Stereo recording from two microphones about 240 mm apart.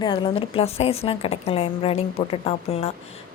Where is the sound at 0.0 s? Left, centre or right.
Left.